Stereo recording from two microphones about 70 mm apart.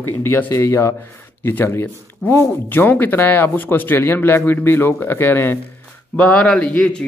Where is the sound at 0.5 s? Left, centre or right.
Left.